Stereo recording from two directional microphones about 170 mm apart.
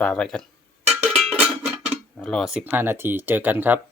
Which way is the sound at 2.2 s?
Centre (ahead or behind).